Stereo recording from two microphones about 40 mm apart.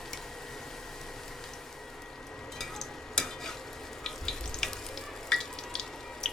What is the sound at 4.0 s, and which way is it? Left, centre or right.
Frying, centre.